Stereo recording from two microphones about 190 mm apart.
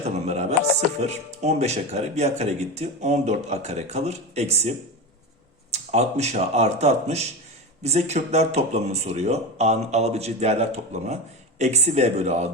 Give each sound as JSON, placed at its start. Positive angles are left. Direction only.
{"t": 0.0, "sound": "music", "side_deg": -35}
{"t": 1.0, "sound": "speech", "side_deg": -35}
{"t": 5.7, "sound": "speech", "side_deg": -35}